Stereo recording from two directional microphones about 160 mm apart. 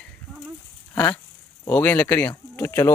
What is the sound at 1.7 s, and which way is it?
Speech, 10° left (ahead or behind).